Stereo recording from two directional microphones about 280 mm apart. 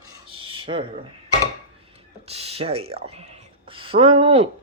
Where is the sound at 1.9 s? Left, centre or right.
Right.